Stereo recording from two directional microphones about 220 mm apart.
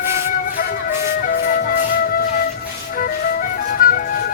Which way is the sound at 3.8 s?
40° left (ahead or behind).